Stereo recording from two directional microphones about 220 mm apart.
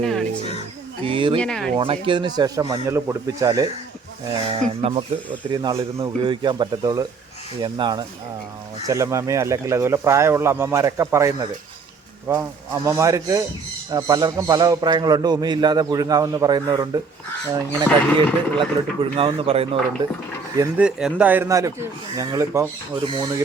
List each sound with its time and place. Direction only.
0.0 s a sound: centre (ahead or behind)
1.0 s a man's voice: 25° right (ahead or behind)
1.4 s speech: 5° left (ahead or behind)
1.7 s a man's voice: 25° right (ahead or behind)
17.8 s speech: 5° left (ahead or behind)
19.1 s a man's voice: 25° right (ahead or behind)
20.6 s a man's voice: 5° right (ahead or behind); by 23.4 s 20° right (ahead or behind)